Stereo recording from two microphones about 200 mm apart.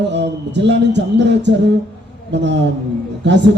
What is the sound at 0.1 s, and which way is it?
A man's voice, 60° right (ahead or behind).